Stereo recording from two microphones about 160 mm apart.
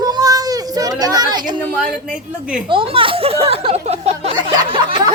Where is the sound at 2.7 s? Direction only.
35° right (ahead or behind).